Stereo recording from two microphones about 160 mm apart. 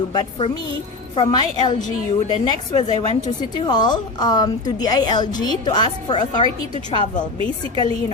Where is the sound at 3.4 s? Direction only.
30° left (ahead or behind).